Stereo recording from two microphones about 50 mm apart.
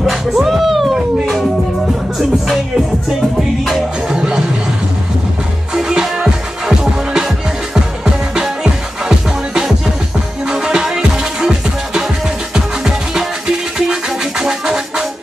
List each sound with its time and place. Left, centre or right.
0.0 s cat: centre
1.2 s music: centre
4.1 s music: centre
5.8 s music: centre
8.0 s music: centre
10.5 s music: centre